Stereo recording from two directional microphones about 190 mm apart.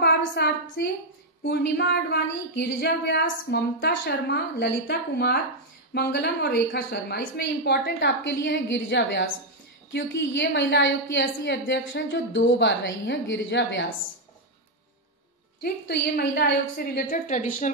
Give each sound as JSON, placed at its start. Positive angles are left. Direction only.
{"t": 0.0, "sound": "a woman's voice", "side_deg": 60}
{"t": 15.6, "sound": "a woman's voice", "side_deg": 60}